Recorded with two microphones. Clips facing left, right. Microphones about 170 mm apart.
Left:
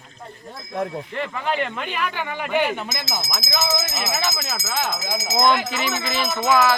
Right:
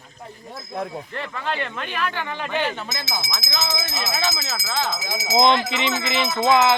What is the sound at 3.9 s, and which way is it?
Speech, 20° left (ahead or behind).